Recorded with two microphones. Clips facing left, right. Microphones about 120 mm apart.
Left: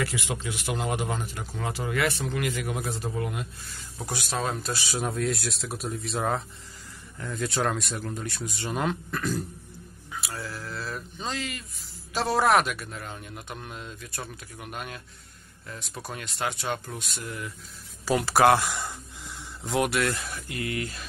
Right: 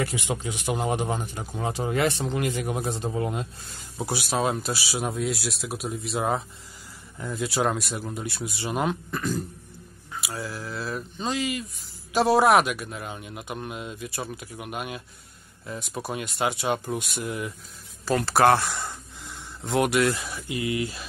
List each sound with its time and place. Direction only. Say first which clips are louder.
0.1 s a man's voice: right 2 dB; 20° right (ahead or behind)
4.0 s speech: right 5 dB; 10° right (ahead or behind)
7.2 s speech: right 2 dB; 15° right (ahead or behind)
18.0 s speech: right 1 dB; 10° left (ahead or behind); by 21.0 s 10° right (ahead or behind)